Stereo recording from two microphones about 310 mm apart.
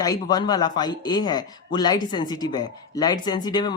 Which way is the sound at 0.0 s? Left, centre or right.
Centre.